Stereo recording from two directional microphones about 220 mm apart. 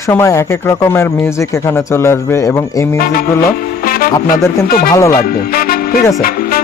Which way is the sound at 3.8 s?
40° left (ahead or behind).